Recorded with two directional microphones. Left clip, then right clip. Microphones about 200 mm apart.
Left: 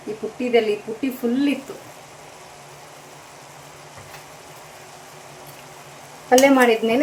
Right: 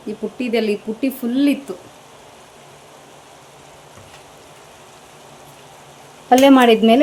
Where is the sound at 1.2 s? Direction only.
45° right (ahead or behind).